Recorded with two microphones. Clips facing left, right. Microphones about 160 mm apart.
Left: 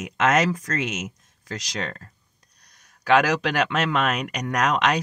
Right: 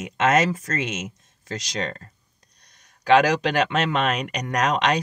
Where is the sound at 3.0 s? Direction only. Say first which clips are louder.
Right 2 dB; 30° right (ahead or behind).